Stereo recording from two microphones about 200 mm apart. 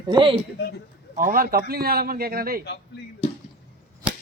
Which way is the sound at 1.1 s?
45° right (ahead or behind).